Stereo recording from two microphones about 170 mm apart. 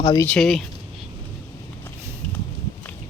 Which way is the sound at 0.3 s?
Centre (ahead or behind).